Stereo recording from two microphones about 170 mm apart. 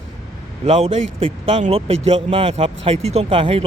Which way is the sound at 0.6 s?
40° right (ahead or behind).